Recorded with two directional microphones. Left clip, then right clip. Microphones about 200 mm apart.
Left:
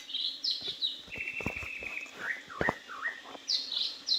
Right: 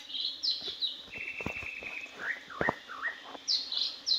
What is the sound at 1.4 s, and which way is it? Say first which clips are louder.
Walk: left 1 dB; 5° left (ahead or behind).